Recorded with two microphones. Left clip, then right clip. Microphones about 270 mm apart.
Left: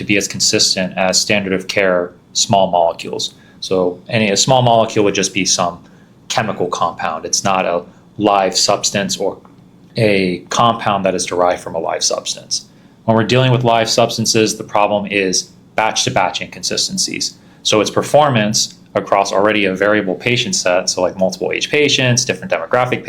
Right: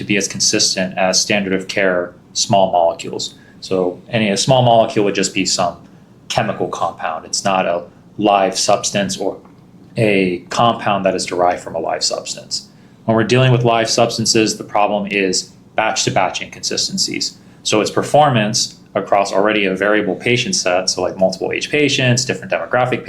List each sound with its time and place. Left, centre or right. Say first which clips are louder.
0.1 s speech: left 2 dB; left